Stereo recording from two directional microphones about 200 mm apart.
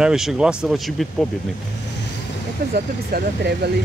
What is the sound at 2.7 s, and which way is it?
Speech, 50° right (ahead or behind).